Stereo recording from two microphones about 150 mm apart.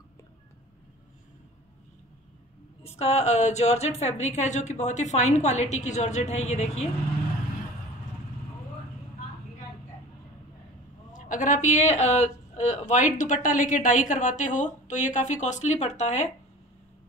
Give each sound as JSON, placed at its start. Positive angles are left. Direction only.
{"t": 2.8, "sound": "a woman's voice", "side_deg": 45}
{"t": 11.1, "sound": "a woman's voice", "side_deg": 60}